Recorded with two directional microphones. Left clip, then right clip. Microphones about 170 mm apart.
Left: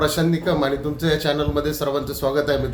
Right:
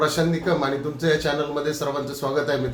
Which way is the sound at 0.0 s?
50° left (ahead or behind).